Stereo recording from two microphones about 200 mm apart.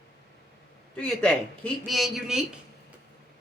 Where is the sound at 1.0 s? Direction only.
5° left (ahead or behind).